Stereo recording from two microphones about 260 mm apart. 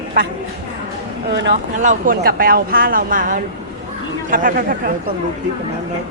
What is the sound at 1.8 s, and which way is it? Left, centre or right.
Speech, right.